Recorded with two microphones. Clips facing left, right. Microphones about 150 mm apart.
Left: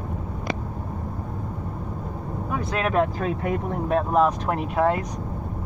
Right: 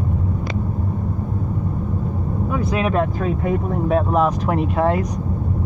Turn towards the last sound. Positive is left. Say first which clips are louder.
# right 4 dB
turn(degrees=0)  # may be behind; listen again after turning